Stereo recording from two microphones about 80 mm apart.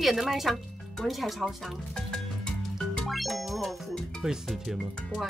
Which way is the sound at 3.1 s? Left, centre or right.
Centre.